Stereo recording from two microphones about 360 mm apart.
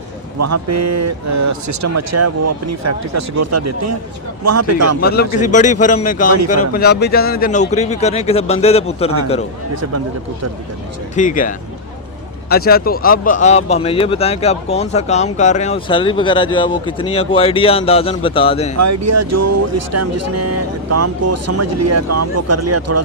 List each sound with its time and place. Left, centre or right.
0.3 s speech: right
4.9 s speech: left
11.1 s speech: left
18.8 s speech: right